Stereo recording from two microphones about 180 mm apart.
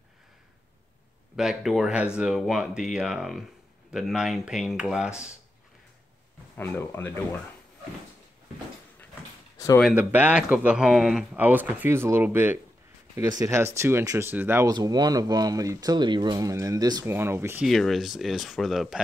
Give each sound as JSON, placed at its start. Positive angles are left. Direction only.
{"t": 1.3, "sound": "speech", "side_deg": -5}
{"t": 6.5, "sound": "speech", "side_deg": 10}
{"t": 9.9, "sound": "speech", "side_deg": -10}
{"t": 14.7, "sound": "speech", "side_deg": -20}
{"t": 17.6, "sound": "speech", "side_deg": 0}